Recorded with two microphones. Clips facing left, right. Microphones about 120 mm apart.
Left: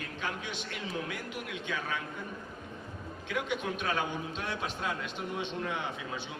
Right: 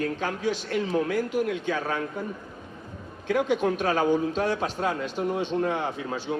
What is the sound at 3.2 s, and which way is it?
A man's voice, 40° right (ahead or behind).